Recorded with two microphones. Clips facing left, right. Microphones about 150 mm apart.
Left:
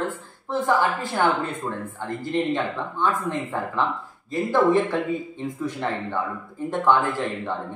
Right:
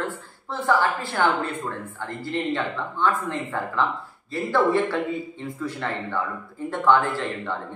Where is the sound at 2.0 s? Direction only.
15° left (ahead or behind).